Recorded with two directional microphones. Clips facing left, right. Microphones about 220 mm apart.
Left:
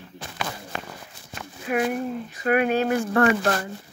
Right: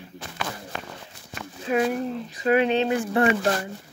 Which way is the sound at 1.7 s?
30° right (ahead or behind).